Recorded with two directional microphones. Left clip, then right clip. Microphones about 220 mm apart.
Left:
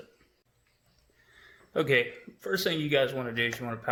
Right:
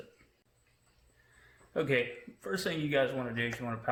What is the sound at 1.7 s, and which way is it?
Speech, 35° left (ahead or behind).